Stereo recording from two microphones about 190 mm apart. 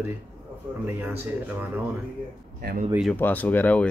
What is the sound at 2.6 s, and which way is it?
Speech, 50° right (ahead or behind).